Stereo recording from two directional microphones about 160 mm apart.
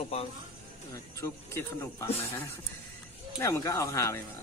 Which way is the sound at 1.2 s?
15° left (ahead or behind).